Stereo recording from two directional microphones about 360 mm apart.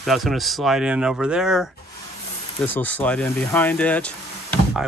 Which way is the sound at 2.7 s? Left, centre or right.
Centre.